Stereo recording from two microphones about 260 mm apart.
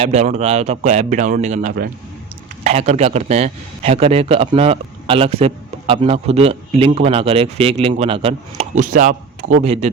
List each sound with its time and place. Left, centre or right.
0.0 s a man's voice: right